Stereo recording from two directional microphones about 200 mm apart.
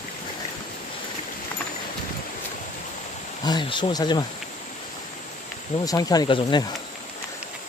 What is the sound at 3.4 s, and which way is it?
Speech, 20° left (ahead or behind).